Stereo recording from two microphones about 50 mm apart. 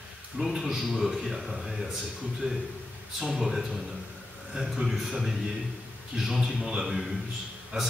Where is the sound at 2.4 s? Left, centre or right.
Right.